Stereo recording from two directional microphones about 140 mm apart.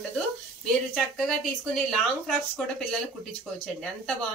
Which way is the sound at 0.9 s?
Centre (ahead or behind).